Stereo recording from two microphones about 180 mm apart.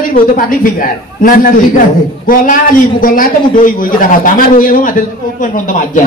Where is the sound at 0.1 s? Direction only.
50° left (ahead or behind).